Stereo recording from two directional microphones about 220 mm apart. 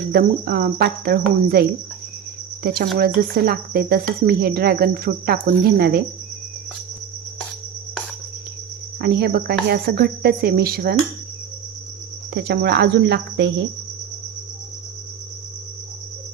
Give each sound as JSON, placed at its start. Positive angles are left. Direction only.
{"t": 0.1, "sound": "speech", "side_deg": -45}
{"t": 2.6, "sound": "speech", "side_deg": -45}
{"t": 9.0, "sound": "speech", "side_deg": -45}
{"t": 12.3, "sound": "speech", "side_deg": -50}